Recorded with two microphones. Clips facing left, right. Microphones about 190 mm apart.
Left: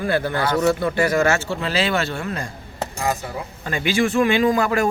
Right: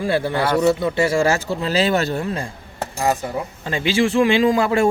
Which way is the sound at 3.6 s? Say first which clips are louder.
Right 1 dB; 25° right (ahead or behind).